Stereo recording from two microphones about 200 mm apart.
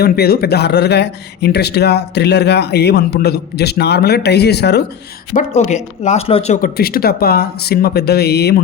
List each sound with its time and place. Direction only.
0.0 s speech: 50° left (ahead or behind)
5.3 s speech: 35° left (ahead or behind)
6.6 s speech: 50° left (ahead or behind)